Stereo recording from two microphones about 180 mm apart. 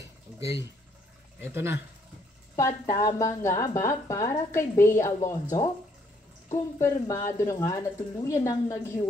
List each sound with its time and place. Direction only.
0.4 s speech: 15° right (ahead or behind)
2.5 s a woman's voice: 15° left (ahead or behind)
6.5 s a woman's voice: 15° left (ahead or behind)